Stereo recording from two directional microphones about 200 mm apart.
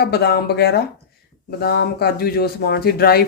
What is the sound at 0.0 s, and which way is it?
Speech, 55° left (ahead or behind).